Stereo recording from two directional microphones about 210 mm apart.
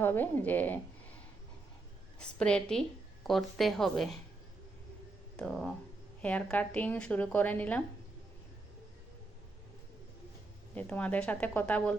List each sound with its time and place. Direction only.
0.0 s a woman's voice: 10° left (ahead or behind)
2.1 s speech: 5° left (ahead or behind)
5.4 s a woman's voice: 5° left (ahead or behind)
10.8 s a woman's voice: 5° left (ahead or behind)